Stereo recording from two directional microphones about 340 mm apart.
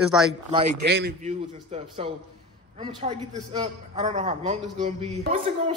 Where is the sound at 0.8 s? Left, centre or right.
Right.